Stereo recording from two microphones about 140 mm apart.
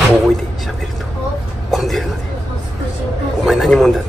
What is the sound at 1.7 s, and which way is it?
Speech, centre (ahead or behind).